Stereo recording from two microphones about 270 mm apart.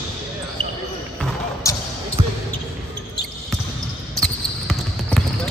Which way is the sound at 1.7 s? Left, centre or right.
Centre.